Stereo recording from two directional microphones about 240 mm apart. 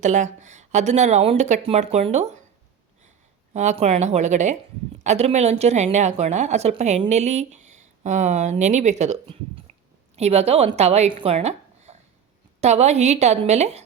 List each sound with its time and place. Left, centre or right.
0.0 s a woman's voice: right
3.5 s a woman's voice: right